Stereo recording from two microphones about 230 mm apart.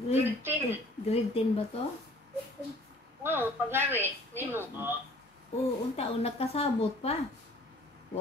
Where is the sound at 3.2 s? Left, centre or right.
Centre.